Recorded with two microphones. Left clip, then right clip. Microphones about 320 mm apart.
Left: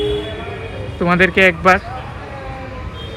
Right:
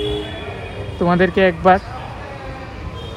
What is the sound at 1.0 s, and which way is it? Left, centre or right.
Speech, centre.